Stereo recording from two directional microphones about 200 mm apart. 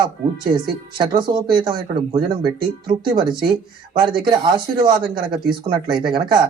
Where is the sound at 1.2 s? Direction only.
20° right (ahead or behind).